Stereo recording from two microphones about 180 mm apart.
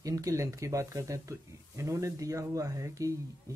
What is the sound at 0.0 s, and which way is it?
Speech, 20° right (ahead or behind).